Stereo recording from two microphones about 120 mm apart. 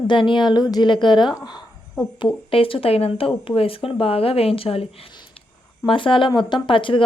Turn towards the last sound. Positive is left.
turn(degrees=45)  # may be behind; listen again after turning